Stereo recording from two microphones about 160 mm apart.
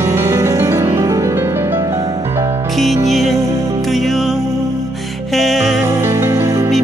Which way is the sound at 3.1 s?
Centre (ahead or behind).